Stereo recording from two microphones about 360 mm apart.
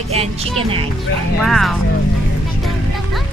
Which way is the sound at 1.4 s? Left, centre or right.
Centre.